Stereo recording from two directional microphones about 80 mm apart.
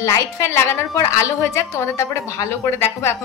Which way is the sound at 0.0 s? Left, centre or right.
Left.